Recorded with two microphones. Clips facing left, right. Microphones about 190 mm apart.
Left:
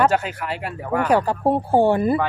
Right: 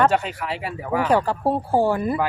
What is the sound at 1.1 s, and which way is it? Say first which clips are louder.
Speech: left 2 dB; 15° left (ahead or behind).